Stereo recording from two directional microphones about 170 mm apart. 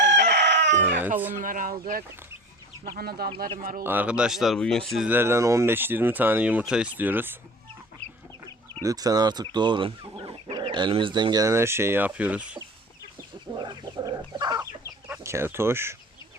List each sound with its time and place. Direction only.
0.0 s chicken: 90° right
1.4 s speech: 50° right (ahead or behind)
3.8 s speech: 10° right (ahead or behind)
5.0 s speech: 15° right (ahead or behind)
8.8 s speech: 20° right (ahead or behind)
13.6 s chicken: 25° right (ahead or behind)
15.1 s speech: 15° right (ahead or behind)